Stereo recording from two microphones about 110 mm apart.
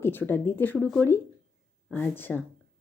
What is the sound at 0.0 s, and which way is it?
Speech, 20° left (ahead or behind).